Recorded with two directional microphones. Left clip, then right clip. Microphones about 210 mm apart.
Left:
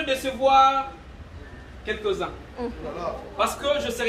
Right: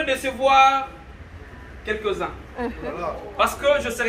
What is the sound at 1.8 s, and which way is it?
Speech, 15° right (ahead or behind).